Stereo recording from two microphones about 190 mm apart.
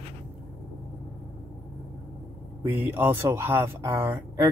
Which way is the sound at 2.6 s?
10° right (ahead or behind).